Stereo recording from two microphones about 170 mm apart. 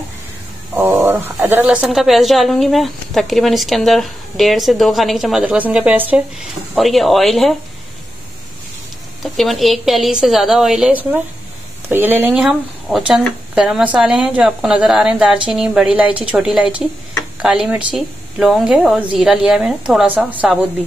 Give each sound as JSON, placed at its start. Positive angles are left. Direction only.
{"t": 0.7, "sound": "a sound", "side_deg": -10}
{"t": 1.4, "sound": "speech", "side_deg": -10}
{"t": 9.2, "sound": "speech", "side_deg": 0}